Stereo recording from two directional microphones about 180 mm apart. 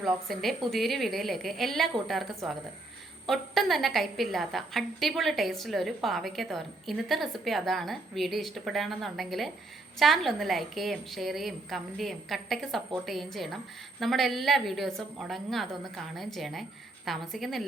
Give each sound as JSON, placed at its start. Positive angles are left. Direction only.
{"t": 0.0, "sound": "a woman's voice", "side_deg": 0}